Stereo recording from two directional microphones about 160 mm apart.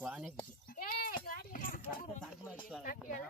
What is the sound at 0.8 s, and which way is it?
Speech, 60° left (ahead or behind).